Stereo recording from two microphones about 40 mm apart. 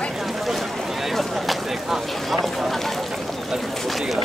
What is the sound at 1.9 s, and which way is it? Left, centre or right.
Speech, centre.